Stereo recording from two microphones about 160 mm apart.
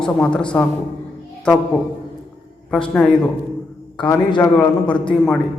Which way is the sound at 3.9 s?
30° left (ahead or behind).